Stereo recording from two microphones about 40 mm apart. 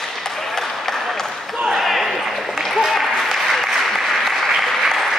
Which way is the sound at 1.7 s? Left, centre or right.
Centre.